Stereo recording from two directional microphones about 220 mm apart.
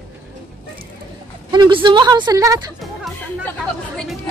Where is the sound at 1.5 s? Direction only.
20° right (ahead or behind).